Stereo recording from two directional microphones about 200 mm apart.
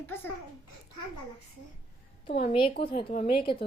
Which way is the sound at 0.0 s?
10° left (ahead or behind).